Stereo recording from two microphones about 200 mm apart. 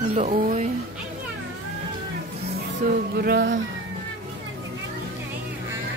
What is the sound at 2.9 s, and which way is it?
Music, 50° right (ahead or behind).